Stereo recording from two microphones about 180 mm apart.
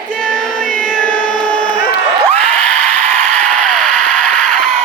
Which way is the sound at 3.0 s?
40° right (ahead or behind).